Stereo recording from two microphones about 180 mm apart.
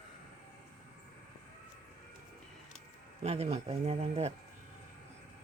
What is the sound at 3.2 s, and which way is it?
Speech, 35° right (ahead or behind).